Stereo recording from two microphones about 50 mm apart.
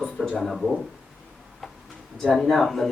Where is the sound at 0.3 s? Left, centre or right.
Centre.